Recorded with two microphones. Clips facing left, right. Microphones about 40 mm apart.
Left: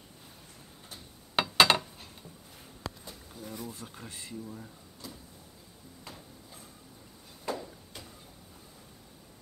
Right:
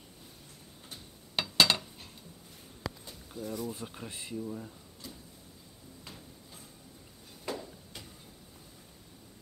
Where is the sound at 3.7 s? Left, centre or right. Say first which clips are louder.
Right 3 dB; right.